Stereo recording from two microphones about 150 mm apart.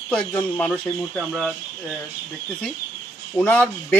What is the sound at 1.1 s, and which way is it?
Speech, centre (ahead or behind).